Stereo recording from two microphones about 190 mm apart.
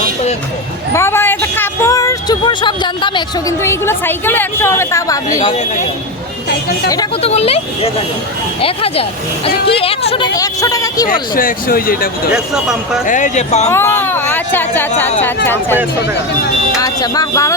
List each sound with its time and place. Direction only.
0.9 s a sound: 10° left (ahead or behind)
3.6 s a woman's voice: 15° left (ahead or behind)
5.4 s speech: 40° left (ahead or behind)
7.2 s speech: 30° left (ahead or behind)
8.6 s speech: 30° left (ahead or behind)
10.3 s speech: 20° left (ahead or behind)
11.1 s speech: 45° left (ahead or behind)
12.3 s speech: 5° right (ahead or behind)
13.1 s speech: 40° left (ahead or behind)
13.7 s speech: 10° left (ahead or behind)
16.7 s a woman's voice: 20° left (ahead or behind)